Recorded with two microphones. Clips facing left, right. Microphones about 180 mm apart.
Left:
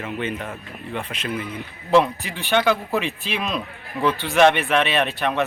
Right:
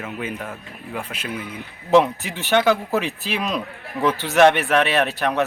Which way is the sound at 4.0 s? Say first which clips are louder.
Right 1 dB; 5° left (ahead or behind).